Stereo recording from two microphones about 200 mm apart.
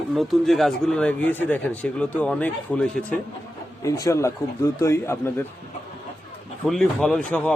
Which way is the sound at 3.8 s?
15° left (ahead or behind).